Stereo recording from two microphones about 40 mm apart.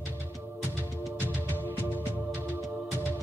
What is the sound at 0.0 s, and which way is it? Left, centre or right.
Music, right.